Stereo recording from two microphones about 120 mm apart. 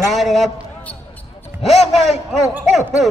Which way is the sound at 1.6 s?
60° left (ahead or behind).